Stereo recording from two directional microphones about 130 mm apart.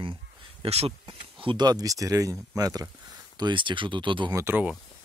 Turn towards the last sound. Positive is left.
turn(degrees=-15)  # may be behind; listen again after turning